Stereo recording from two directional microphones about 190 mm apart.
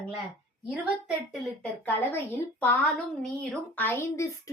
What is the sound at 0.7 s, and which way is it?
A woman's voice, centre (ahead or behind).